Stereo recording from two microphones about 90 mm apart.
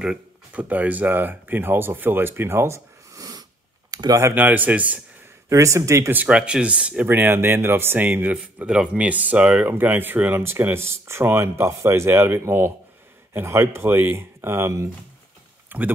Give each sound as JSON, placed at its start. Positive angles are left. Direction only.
{"t": 0.6, "sound": "speech", "side_deg": -15}
{"t": 4.3, "sound": "speech", "side_deg": -20}
{"t": 5.5, "sound": "speech", "side_deg": -35}
{"t": 6.1, "sound": "speech", "side_deg": -10}
{"t": 7.1, "sound": "speech", "side_deg": -25}
{"t": 15.7, "sound": "speech", "side_deg": -20}